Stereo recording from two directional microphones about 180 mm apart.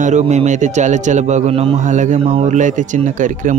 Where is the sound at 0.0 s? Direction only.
40° right (ahead or behind).